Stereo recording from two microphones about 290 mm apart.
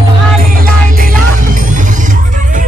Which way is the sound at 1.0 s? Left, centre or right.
Right.